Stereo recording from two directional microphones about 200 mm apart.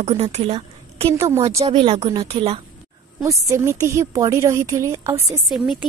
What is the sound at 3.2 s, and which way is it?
A woman's voice, 15° right (ahead or behind).